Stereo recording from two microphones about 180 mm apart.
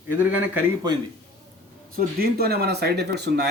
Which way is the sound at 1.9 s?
60° right (ahead or behind).